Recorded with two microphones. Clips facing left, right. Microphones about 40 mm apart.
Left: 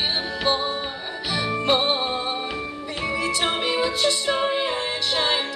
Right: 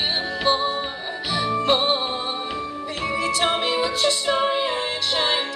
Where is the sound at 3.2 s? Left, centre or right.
Centre.